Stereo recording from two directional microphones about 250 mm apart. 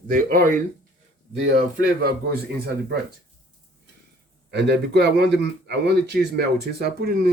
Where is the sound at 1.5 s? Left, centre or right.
Right.